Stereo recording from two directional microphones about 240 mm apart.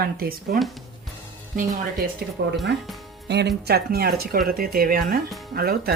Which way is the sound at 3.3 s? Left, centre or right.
Right.